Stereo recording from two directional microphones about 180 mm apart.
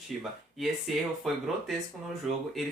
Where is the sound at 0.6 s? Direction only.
Centre (ahead or behind).